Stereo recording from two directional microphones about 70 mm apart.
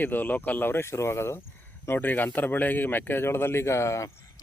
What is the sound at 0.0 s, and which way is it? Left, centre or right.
Speech, left.